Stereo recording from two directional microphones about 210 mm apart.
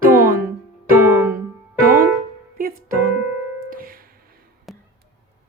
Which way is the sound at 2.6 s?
45° right (ahead or behind).